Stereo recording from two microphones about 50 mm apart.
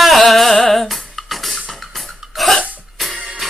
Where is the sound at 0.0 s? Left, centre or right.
Centre.